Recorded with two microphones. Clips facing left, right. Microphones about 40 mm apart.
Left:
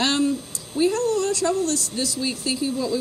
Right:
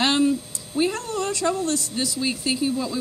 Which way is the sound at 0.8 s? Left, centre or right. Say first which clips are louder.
Left 3 dB; right.